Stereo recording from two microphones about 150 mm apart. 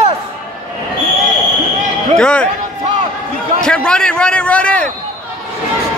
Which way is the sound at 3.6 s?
5° left (ahead or behind).